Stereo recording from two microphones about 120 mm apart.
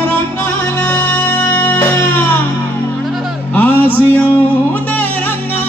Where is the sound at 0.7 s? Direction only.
15° left (ahead or behind).